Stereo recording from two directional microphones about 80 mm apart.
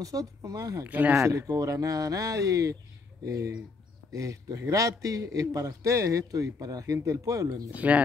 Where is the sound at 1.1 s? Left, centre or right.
Right.